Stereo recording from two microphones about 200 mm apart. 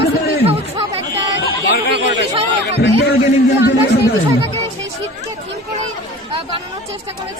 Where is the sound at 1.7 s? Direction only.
60° left (ahead or behind).